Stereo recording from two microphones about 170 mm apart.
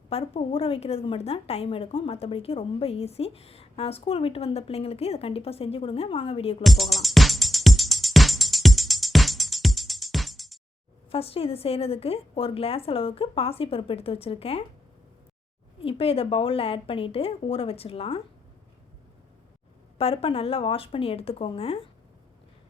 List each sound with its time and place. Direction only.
0.1 s a woman's voice: 35° left (ahead or behind)
6.6 s music: centre (ahead or behind)
11.1 s a woman's voice: 35° left (ahead or behind)
15.8 s a woman's voice: 35° left (ahead or behind)
20.0 s a woman's voice: 35° left (ahead or behind)